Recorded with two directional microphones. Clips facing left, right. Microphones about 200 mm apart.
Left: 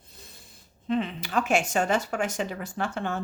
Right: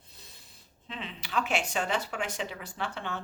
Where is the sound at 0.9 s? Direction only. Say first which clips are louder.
Left 13 dB; 50° left (ahead or behind).